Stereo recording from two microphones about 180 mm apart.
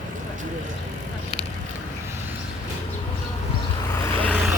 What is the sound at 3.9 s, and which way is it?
Vehicle, 10° left (ahead or behind).